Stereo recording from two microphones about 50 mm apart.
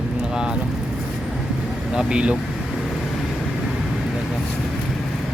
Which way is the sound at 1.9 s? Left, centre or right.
Centre.